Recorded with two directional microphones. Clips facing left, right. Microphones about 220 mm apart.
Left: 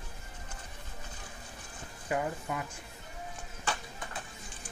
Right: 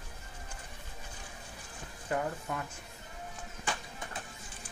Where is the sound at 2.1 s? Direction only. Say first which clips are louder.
Left 1 dB; 10° left (ahead or behind).